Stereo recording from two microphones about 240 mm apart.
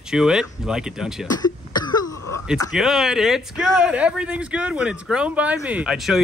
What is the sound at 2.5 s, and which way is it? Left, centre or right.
Speech, centre.